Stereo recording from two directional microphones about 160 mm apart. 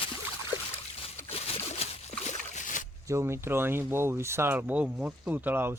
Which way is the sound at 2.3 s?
50° left (ahead or behind).